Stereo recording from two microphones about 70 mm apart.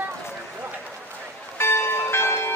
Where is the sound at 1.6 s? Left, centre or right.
Left.